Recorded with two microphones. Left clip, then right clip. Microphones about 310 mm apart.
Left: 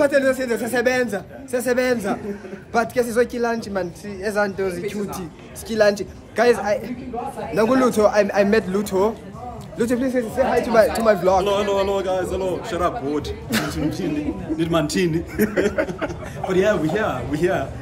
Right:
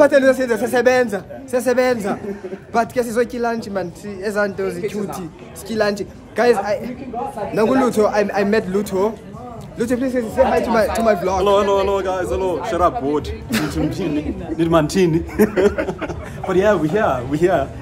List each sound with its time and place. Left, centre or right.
0.0 s a man's voice: centre
11.4 s a man's voice: centre
13.5 s a man's voice: centre
14.6 s a man's voice: centre